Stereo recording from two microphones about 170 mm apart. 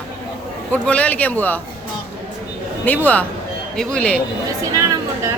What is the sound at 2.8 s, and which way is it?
Speech, 10° left (ahead or behind).